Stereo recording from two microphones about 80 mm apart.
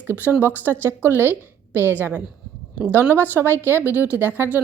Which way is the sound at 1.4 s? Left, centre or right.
Left.